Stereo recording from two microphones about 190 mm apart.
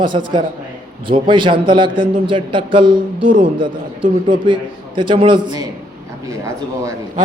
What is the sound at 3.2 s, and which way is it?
Speech, 45° right (ahead or behind).